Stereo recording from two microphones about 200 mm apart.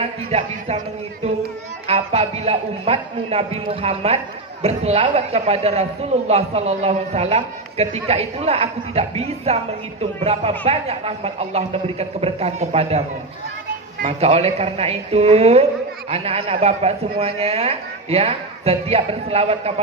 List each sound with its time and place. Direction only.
0.0 s speech: 30° right (ahead or behind)
1.9 s a man's voice: 30° right (ahead or behind)
14.0 s a man's voice: 30° right (ahead or behind)